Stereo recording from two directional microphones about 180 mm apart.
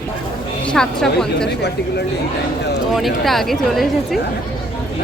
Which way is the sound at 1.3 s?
65° left (ahead or behind).